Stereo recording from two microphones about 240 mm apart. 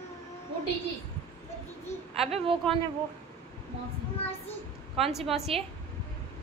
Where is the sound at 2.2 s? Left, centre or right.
Right.